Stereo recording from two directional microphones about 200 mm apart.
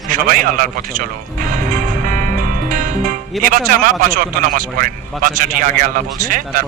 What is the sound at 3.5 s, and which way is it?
A man's voice, 45° right (ahead or behind).